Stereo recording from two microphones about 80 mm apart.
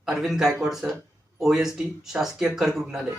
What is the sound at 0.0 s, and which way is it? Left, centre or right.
Speech, centre.